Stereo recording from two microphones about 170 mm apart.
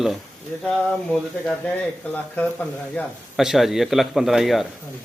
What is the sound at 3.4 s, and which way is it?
Speech, centre (ahead or behind).